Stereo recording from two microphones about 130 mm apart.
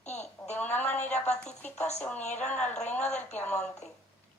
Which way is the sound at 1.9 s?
10° left (ahead or behind).